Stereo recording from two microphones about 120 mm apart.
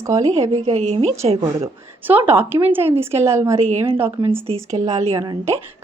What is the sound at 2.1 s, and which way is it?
A woman's voice, 15° right (ahead or behind).